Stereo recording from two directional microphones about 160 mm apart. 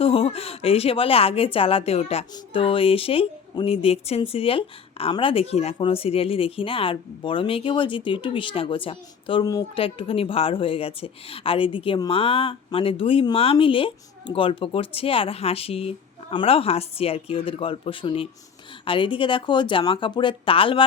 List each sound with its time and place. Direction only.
0.0 s speech: 35° left (ahead or behind)